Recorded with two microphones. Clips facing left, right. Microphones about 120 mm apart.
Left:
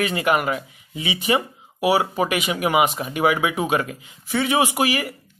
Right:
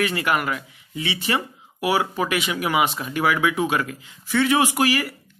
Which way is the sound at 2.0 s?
40° left (ahead or behind).